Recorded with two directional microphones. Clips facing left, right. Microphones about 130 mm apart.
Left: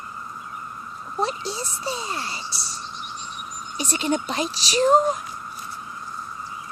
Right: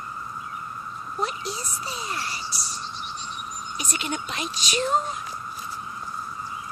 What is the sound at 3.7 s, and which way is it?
Speech, 35° left (ahead or behind).